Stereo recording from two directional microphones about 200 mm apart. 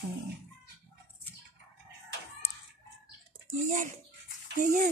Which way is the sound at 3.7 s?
40° right (ahead or behind).